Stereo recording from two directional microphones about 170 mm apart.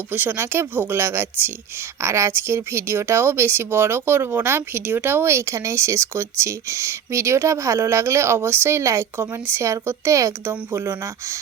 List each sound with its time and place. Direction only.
0.1 s speech: 10° right (ahead or behind)